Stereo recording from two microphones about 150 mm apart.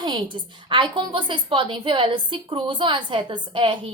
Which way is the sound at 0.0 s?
30° right (ahead or behind).